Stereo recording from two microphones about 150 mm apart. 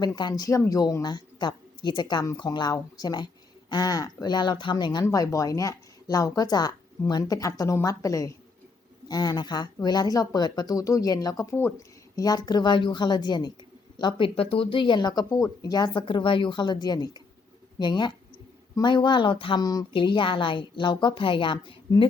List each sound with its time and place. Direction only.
0.0 s speech: 30° left (ahead or behind)